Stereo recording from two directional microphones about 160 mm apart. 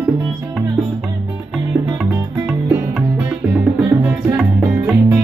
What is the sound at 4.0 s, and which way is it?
Music, 10° right (ahead or behind).